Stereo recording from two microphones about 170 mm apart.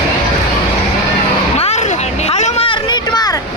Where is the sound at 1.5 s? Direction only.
40° left (ahead or behind); by 3.4 s 25° left (ahead or behind).